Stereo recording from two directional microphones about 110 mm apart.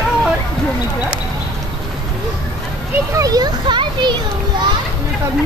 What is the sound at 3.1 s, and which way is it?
Children playing, 35° right (ahead or behind).